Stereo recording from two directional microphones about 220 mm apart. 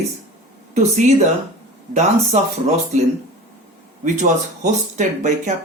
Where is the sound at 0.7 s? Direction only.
30° right (ahead or behind).